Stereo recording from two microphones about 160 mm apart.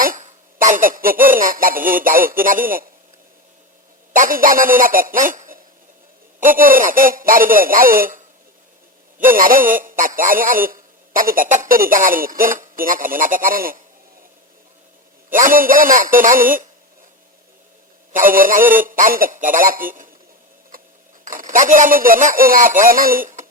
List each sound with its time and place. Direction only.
0.0 s a man's voice: 55° right (ahead or behind)
4.1 s a man's voice: 55° right (ahead or behind)
15.3 s a man's voice: 55° right (ahead or behind)
18.1 s a man's voice: 60° right (ahead or behind)
20.7 s a sound: 65° right (ahead or behind)
21.2 s a man's voice: 55° right (ahead or behind)